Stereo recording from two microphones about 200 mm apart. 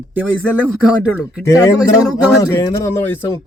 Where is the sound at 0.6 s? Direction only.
5° right (ahead or behind).